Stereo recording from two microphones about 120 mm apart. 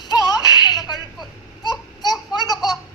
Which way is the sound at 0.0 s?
35° left (ahead or behind).